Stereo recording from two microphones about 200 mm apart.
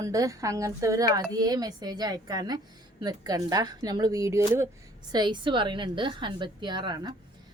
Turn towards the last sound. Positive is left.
turn(degrees=-20)  # may be behind; listen again after turning